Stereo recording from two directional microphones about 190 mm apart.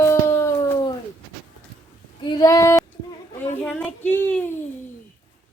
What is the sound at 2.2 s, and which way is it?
Female singing, 20° left (ahead or behind).